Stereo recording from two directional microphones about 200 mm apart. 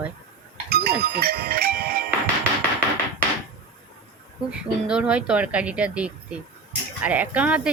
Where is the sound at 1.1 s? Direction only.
50° right (ahead or behind).